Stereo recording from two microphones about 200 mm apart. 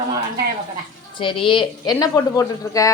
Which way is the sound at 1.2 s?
25° left (ahead or behind).